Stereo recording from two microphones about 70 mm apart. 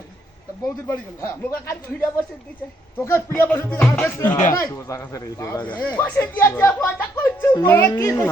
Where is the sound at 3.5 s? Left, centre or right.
Left.